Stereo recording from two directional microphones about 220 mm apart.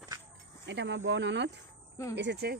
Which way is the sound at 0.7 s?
55° right (ahead or behind).